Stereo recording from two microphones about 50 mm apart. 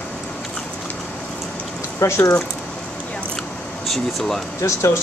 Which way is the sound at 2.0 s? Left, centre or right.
Left.